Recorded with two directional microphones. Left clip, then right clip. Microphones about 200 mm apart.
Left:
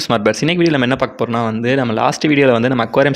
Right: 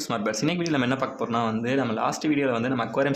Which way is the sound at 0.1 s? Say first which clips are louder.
Left 11 dB; 40° left (ahead or behind).